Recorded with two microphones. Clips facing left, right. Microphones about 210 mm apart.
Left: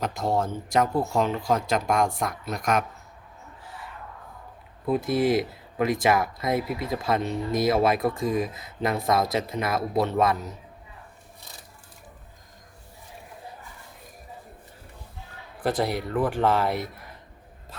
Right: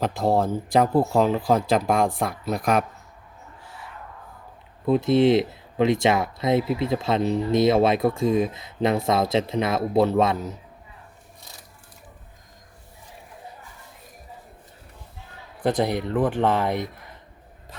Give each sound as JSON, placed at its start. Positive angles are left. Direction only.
{"t": 0.1, "sound": "speech", "side_deg": -30}
{"t": 4.9, "sound": "speech", "side_deg": -25}
{"t": 15.8, "sound": "speech", "side_deg": -20}